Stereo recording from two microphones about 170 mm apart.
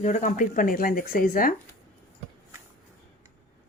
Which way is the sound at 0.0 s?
45° left (ahead or behind).